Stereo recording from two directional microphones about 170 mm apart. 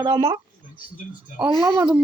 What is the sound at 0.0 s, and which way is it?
Speech, 30° right (ahead or behind).